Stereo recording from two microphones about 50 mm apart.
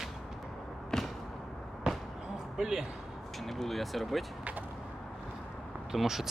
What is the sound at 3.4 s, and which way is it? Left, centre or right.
Vehicle, centre.